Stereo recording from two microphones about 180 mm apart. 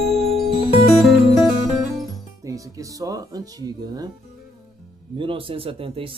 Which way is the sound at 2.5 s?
20° right (ahead or behind).